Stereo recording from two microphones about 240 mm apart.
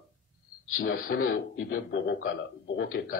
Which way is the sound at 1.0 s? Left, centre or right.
Left.